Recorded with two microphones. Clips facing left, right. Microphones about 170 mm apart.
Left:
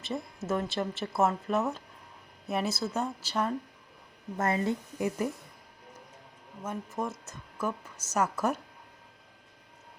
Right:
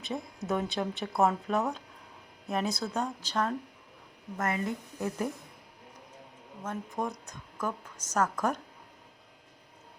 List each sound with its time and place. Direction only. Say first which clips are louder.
0.0 s speech: left 1 dB; centre (ahead or behind)
4.4 s speech: left 3 dB; 30° left (ahead or behind)
4.9 s a woman's voice: even; 10° left (ahead or behind)
6.7 s a woman's voice: even; centre (ahead or behind)